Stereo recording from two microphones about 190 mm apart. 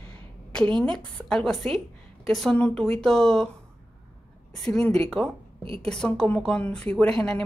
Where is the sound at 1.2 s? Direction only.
Centre (ahead or behind).